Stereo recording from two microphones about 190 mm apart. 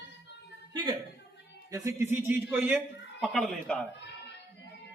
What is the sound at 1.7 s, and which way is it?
Speech, 15° right (ahead or behind).